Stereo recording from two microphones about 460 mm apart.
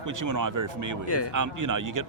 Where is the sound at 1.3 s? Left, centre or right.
Right.